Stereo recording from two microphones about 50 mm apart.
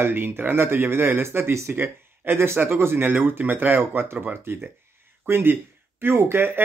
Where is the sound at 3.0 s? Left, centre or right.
Right.